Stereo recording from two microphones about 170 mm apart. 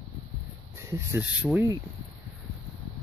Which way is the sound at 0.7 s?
15° right (ahead or behind).